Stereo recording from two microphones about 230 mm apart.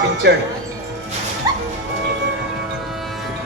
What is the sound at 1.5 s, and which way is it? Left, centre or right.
Music, centre.